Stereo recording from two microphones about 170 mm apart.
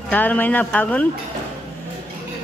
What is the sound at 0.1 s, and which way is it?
Speech, 10° left (ahead or behind).